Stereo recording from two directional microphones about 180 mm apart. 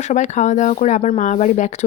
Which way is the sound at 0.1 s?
40° left (ahead or behind).